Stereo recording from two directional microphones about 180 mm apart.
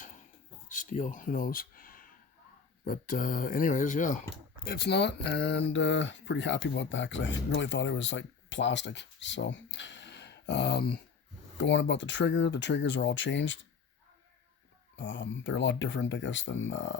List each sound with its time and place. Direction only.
0.7 s speech: 45° left (ahead or behind); by 11.0 s 65° left (ahead or behind)
11.5 s speech: 85° left
14.9 s speech: 90° left